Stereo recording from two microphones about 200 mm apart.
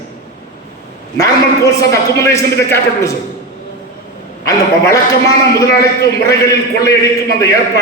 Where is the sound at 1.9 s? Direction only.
15° left (ahead or behind).